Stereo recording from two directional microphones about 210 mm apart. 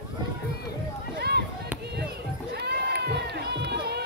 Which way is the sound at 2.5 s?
50° right (ahead or behind).